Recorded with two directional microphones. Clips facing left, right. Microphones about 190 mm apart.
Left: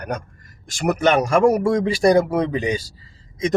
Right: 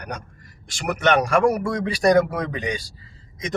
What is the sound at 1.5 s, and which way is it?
Speech, 30° left (ahead or behind).